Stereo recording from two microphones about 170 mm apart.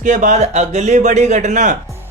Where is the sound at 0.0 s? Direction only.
45° right (ahead or behind).